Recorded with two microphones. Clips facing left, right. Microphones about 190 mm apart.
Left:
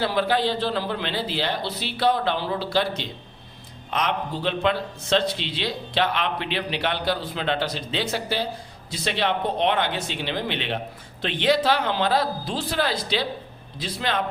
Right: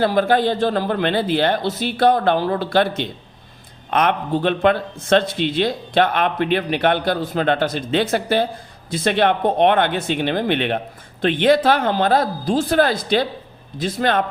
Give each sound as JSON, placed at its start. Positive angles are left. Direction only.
{"t": 0.0, "sound": "a man's voice", "side_deg": -50}